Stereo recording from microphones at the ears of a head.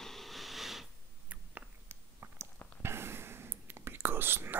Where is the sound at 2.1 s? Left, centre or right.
Right.